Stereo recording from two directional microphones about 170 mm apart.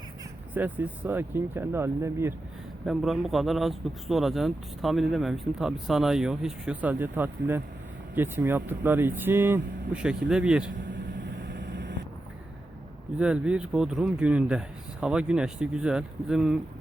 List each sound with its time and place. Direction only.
0.5 s speech: 10° right (ahead or behind)
2.8 s speech: centre (ahead or behind)
11.4 s vehicle: 90° right
13.1 s speech: 5° right (ahead or behind)